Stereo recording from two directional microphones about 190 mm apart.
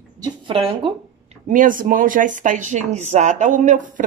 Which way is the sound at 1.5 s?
45° right (ahead or behind).